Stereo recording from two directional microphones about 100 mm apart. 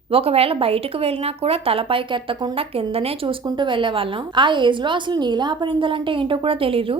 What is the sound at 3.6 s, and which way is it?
A woman's voice, 55° right (ahead or behind).